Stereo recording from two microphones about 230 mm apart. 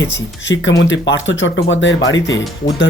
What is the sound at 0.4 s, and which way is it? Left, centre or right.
Speech, left.